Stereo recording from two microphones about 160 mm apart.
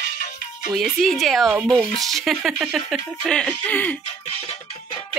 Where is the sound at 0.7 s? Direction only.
Centre (ahead or behind).